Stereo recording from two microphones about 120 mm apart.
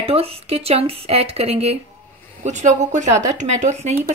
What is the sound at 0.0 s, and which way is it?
Speech, 55° right (ahead or behind).